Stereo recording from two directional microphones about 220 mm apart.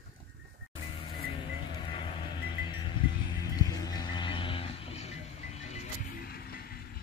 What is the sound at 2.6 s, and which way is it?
Livestock, 20° left (ahead or behind).